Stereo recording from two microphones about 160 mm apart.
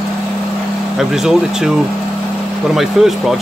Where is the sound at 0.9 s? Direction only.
Centre (ahead or behind).